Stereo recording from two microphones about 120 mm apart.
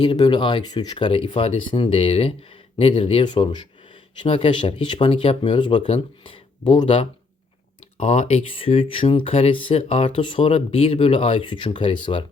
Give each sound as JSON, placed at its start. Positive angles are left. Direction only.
{"t": 0.0, "sound": "speech", "side_deg": 40}
{"t": 7.9, "sound": "speech", "side_deg": 70}
{"t": 8.5, "sound": "speech", "side_deg": 50}
{"t": 10.2, "sound": "speech", "side_deg": 45}